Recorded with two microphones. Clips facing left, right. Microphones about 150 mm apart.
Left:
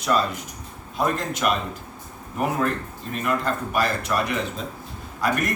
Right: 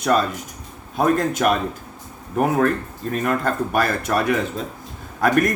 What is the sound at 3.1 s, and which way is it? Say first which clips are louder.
A man's voice: right 3 dB; 45° right (ahead or behind).